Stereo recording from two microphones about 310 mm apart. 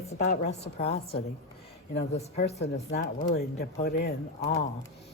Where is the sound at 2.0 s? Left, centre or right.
Left.